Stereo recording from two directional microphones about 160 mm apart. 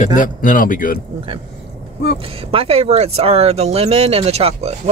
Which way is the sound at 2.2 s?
35° right (ahead or behind).